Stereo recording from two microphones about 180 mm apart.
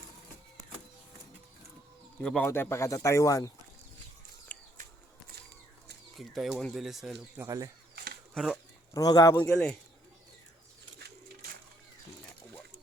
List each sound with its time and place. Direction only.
2.2 s speech: 5° left (ahead or behind)
4.5 s a sound: 5° left (ahead or behind)
6.1 s speech: centre (ahead or behind)
7.4 s speech: 20° right (ahead or behind)
7.9 s a sound: 60° right (ahead or behind)
8.9 s speech: 20° left (ahead or behind)